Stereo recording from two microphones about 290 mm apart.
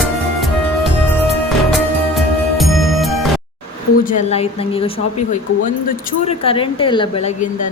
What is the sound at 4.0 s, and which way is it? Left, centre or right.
Speech, left.